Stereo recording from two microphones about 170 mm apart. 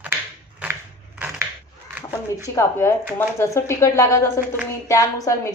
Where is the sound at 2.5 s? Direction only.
15° left (ahead or behind).